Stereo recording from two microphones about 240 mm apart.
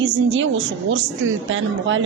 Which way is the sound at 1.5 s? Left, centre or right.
Right.